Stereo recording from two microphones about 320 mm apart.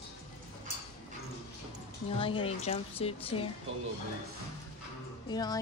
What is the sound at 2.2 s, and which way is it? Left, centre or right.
A woman's voice, centre.